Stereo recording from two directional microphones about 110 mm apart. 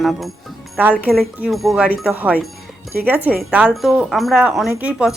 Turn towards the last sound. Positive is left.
turn(degrees=-10)  # may be behind; listen again after turning